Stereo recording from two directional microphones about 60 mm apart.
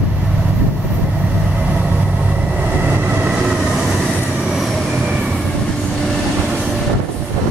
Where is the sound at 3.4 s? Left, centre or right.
Centre.